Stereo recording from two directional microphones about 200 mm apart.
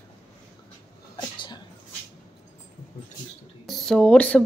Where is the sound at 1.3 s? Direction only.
25° left (ahead or behind).